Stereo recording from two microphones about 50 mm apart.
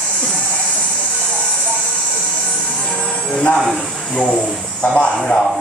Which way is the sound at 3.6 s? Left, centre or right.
Centre.